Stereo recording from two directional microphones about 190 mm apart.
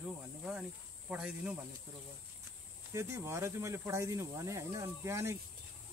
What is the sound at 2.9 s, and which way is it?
Speech, 15° right (ahead or behind).